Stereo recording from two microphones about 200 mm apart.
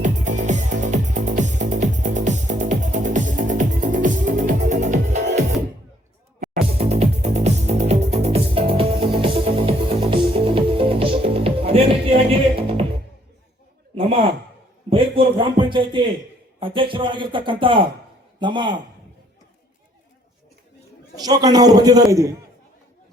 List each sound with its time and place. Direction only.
0.0 s music: 40° right (ahead or behind)
6.7 s music: 30° right (ahead or behind)
13.9 s a sound: 25° right (ahead or behind)
16.6 s speech: 25° right (ahead or behind)
21.2 s speech: 20° right (ahead or behind)